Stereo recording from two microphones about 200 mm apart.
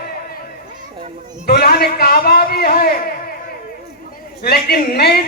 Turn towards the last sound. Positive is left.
turn(degrees=50)  # may be behind; listen again after turning